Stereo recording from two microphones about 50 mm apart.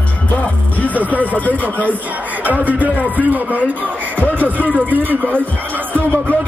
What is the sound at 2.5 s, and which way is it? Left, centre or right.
Speech, right.